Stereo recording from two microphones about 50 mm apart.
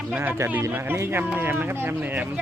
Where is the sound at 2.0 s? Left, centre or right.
Right.